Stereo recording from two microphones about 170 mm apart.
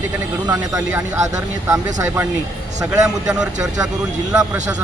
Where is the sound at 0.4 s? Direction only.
20° right (ahead or behind).